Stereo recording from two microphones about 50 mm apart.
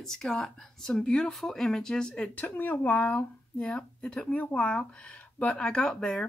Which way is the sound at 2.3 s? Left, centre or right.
Left.